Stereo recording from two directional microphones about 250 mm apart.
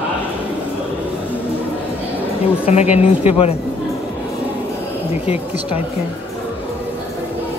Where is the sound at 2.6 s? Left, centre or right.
Left.